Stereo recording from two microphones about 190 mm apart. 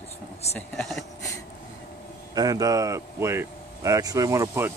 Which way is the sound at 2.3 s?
20° right (ahead or behind).